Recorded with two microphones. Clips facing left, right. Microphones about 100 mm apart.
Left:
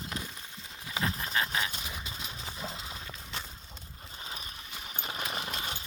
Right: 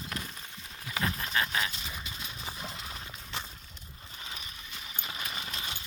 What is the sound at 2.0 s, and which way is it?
Clip-clop, 25° left (ahead or behind).